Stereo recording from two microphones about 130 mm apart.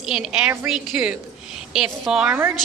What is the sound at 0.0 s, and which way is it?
A woman's voice, 5° right (ahead or behind).